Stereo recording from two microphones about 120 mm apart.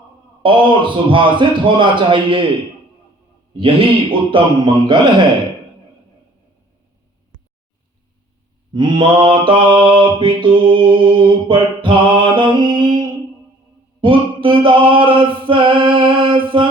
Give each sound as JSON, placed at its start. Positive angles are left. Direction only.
{"t": 0.4, "sound": "mantra", "side_deg": -45}
{"t": 4.3, "sound": "a man's voice", "side_deg": -45}
{"t": 8.7, "sound": "mantra", "side_deg": -40}
{"t": 14.0, "sound": "music", "side_deg": -45}